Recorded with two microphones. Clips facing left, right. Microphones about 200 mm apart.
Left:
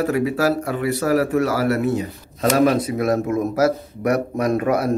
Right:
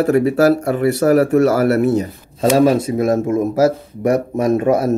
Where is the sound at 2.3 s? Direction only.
30° right (ahead or behind).